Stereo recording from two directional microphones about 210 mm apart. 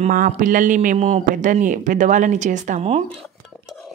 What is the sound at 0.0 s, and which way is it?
Speech, 40° right (ahead or behind).